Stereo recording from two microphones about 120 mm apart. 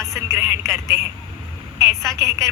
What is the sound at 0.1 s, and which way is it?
A woman's voice, 20° right (ahead or behind).